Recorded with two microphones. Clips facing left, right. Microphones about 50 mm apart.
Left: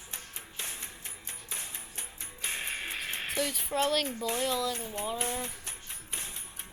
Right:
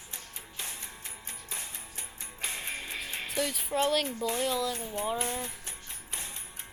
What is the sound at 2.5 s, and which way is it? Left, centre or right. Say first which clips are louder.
Music: left 3 dB; left.